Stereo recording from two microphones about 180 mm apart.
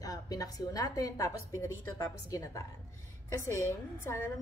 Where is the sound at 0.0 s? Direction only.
20° left (ahead or behind).